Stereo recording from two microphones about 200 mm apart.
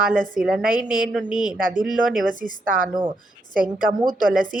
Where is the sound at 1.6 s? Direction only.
45° right (ahead or behind).